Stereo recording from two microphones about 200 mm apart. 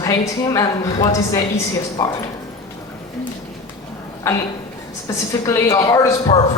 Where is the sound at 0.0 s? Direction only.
15° left (ahead or behind).